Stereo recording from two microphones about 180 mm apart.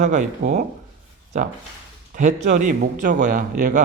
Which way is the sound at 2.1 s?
45° right (ahead or behind).